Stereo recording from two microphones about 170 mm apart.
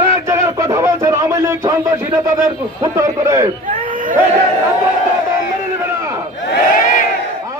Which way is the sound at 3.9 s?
50° right (ahead or behind).